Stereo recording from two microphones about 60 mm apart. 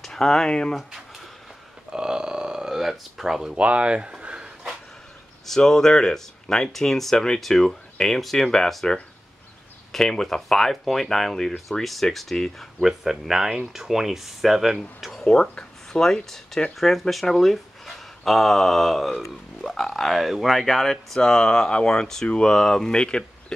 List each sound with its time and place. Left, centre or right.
0.0 s speech: centre
1.9 s a sound: centre
3.5 s speech: right
5.5 s speech: centre
9.9 s speech: centre
15.2 s speech: centre